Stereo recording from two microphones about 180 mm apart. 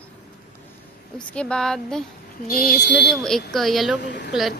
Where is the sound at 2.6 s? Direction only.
50° left (ahead or behind).